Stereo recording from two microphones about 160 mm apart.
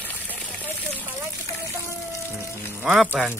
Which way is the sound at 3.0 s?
10° left (ahead or behind).